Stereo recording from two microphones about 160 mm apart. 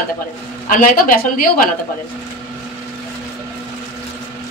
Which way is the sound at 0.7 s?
55° left (ahead or behind).